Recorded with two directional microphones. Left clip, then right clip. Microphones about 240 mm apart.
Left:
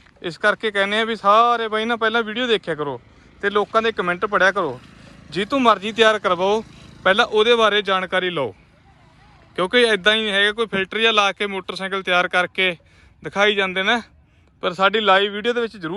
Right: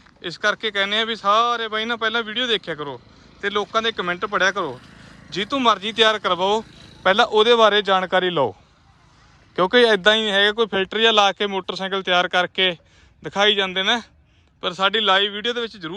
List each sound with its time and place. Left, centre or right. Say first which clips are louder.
0.2 s speech: left 2 dB; centre
9.6 s speech: right 1 dB; centre